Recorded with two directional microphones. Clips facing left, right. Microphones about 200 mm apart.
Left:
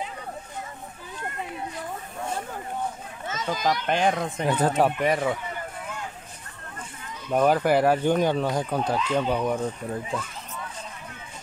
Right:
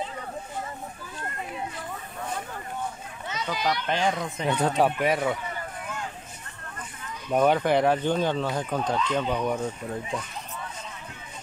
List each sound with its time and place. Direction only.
3.3 s speech: 45° left (ahead or behind)
4.5 s speech: centre (ahead or behind)
7.2 s speech: centre (ahead or behind)